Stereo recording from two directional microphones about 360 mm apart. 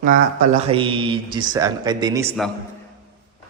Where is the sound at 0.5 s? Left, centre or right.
Centre.